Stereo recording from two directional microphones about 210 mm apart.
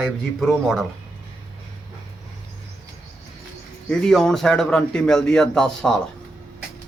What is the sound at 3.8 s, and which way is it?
Speech, 5° left (ahead or behind).